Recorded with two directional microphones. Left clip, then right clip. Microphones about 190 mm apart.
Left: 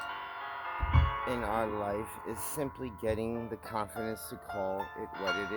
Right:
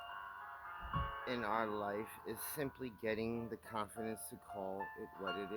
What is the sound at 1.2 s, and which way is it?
Speech, 15° right (ahead or behind).